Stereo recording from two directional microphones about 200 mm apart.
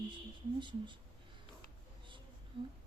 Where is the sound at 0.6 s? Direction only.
25° right (ahead or behind).